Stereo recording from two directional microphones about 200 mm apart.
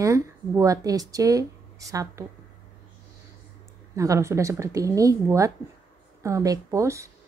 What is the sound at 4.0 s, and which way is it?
Speech, 15° right (ahead or behind).